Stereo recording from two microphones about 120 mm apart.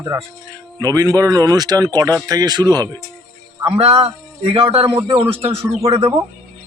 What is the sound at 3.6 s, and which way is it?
A man's voice, 55° right (ahead or behind).